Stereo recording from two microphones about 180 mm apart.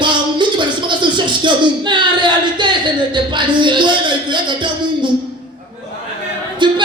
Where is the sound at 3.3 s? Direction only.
25° right (ahead or behind).